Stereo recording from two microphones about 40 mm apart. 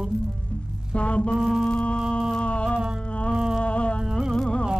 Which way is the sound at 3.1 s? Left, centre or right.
Left.